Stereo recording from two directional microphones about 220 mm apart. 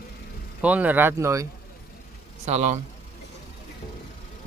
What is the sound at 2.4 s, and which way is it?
Speech, 30° right (ahead or behind).